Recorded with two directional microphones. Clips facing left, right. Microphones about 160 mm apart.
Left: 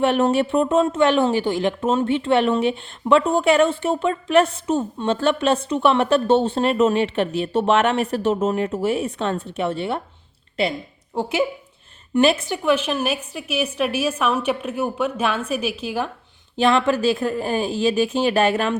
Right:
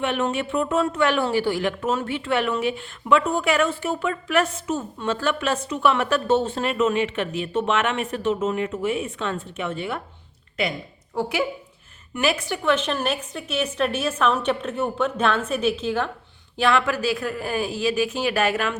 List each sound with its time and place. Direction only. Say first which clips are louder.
0.0 s a woman's voice: left 6 dB; 35° left (ahead or behind)
12.6 s a woman's voice: left 2 dB; 10° left (ahead or behind)
16.6 s speech: left 3 dB; 25° left (ahead or behind)